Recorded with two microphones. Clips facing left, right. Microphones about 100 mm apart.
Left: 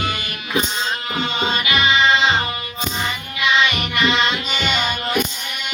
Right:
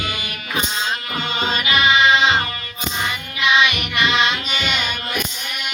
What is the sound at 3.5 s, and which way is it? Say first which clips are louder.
Music: right 1 dB; centre (ahead or behind).